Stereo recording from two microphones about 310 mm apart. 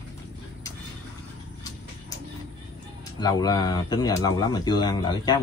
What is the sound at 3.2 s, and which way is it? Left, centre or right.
Speech, centre.